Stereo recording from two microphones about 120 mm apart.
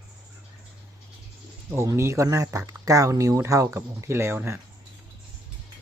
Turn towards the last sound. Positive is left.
turn(degrees=-20)  # may be behind; listen again after turning